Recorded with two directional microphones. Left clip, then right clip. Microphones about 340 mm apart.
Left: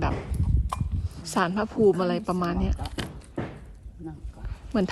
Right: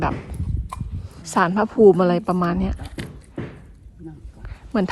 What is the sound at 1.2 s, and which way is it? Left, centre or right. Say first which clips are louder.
A woman's voice: right 7 dB; centre.